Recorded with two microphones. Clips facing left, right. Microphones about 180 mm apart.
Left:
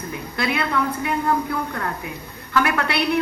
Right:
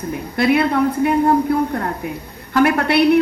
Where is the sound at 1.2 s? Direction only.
35° right (ahead or behind).